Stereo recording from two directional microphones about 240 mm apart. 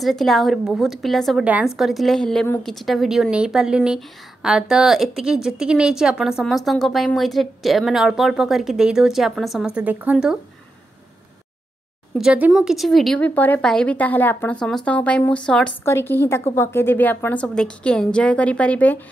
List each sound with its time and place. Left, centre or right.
0.0 s a woman's voice: centre
12.1 s a woman's voice: centre